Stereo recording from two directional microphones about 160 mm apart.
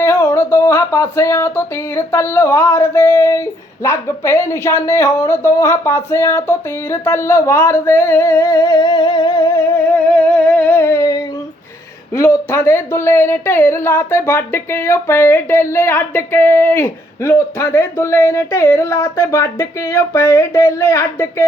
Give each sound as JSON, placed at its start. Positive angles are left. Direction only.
{"t": 0.0, "sound": "speech", "side_deg": 15}
{"t": 10.1, "sound": "humming", "side_deg": 5}
{"t": 12.1, "sound": "speech", "side_deg": 15}